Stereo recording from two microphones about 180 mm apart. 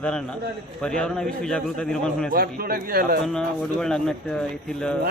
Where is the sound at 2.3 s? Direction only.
55° right (ahead or behind).